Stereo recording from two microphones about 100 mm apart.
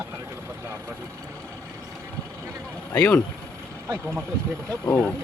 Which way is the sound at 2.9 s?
20° left (ahead or behind).